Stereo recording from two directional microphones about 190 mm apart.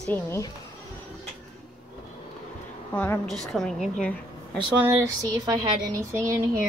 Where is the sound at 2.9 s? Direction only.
5° left (ahead or behind).